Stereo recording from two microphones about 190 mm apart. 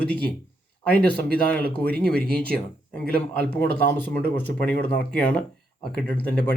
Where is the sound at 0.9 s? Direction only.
5° left (ahead or behind).